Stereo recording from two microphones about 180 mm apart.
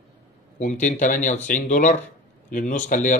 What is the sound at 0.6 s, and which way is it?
Speech, 45° left (ahead or behind).